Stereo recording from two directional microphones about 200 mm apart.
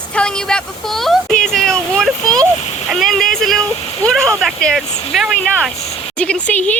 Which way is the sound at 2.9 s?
Centre (ahead or behind).